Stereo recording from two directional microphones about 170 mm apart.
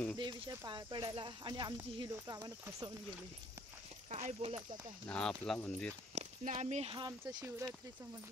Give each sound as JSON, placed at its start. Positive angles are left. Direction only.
{"t": 0.2, "sound": "speech", "side_deg": -25}
{"t": 4.1, "sound": "speech", "side_deg": -40}
{"t": 5.0, "sound": "speech", "side_deg": 5}
{"t": 6.1, "sound": "speech", "side_deg": -40}
{"t": 7.1, "sound": "speech", "side_deg": -25}